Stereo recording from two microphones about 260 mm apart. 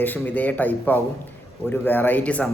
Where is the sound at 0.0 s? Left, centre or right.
Centre.